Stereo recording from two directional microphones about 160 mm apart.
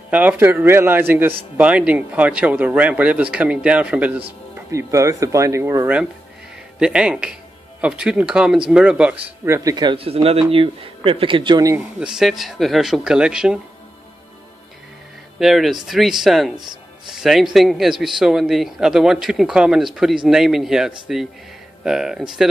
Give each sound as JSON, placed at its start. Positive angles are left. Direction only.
{"t": 0.1, "sound": "speech", "side_deg": -10}
{"t": 4.6, "sound": "speech", "side_deg": -20}
{"t": 11.7, "sound": "speech", "side_deg": -5}
{"t": 15.3, "sound": "speech", "side_deg": 0}